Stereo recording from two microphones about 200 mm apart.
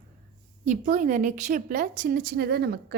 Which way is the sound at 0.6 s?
40° right (ahead or behind).